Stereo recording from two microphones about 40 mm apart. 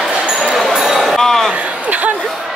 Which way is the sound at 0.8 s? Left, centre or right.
Centre.